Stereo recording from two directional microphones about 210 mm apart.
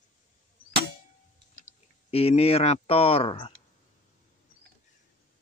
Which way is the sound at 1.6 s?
30° left (ahead or behind).